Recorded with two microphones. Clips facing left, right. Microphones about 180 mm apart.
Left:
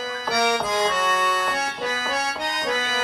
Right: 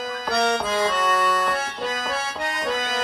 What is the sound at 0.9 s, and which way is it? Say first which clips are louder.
Accordion: right 1 dB; centre (ahead or behind).